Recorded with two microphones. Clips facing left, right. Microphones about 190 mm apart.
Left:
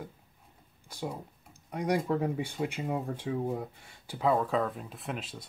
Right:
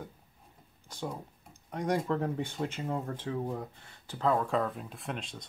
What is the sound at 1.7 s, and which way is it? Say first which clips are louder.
Speech: left 1 dB; 10° left (ahead or behind).